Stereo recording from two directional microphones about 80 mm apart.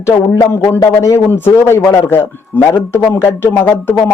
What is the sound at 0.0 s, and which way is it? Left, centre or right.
A man's voice, left.